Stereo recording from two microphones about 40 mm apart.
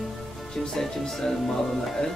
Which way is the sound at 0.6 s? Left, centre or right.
Centre.